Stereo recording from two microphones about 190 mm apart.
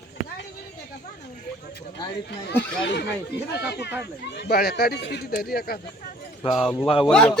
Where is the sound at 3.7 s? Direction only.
60° left (ahead or behind).